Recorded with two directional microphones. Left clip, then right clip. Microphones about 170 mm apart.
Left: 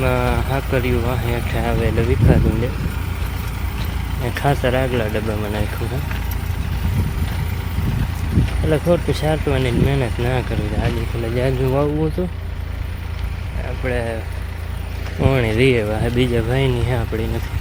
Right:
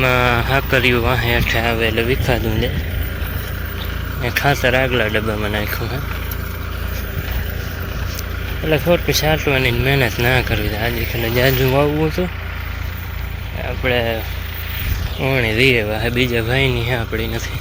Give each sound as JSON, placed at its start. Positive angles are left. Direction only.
{"t": 0.0, "sound": "speech", "side_deg": 5}
{"t": 4.2, "sound": "speech", "side_deg": 10}
{"t": 8.7, "sound": "speech", "side_deg": 15}
{"t": 13.8, "sound": "speech", "side_deg": -10}
{"t": 15.2, "sound": "speech", "side_deg": 15}